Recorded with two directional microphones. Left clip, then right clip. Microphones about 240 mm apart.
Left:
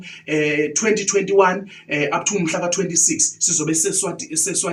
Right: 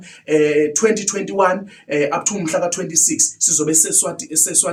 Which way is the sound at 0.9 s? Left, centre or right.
Right.